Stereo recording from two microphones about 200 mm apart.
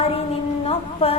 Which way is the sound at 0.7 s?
30° left (ahead or behind).